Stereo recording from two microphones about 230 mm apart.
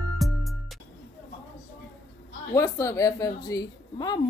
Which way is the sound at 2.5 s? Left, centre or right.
Centre.